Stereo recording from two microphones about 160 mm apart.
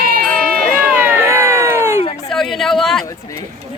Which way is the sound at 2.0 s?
40° left (ahead or behind).